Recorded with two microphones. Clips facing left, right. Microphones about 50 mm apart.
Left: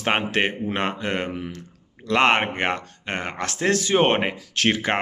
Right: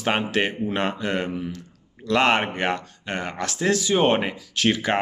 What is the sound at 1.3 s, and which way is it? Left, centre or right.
Speech, left.